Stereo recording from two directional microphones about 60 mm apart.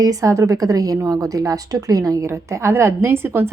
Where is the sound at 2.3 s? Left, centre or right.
Right.